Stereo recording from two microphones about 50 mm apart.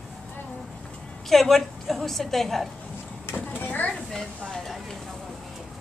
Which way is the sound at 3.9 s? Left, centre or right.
Centre.